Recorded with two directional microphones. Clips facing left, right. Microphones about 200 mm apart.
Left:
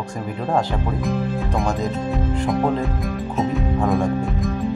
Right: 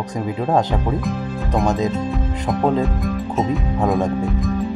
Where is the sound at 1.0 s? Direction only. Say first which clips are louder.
Left 2 dB; centre (ahead or behind).